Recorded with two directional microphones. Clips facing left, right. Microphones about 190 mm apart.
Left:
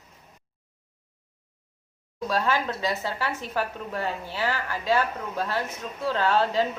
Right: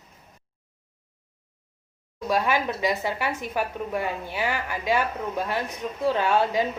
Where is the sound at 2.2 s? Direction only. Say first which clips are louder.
Right 2 dB; 15° right (ahead or behind).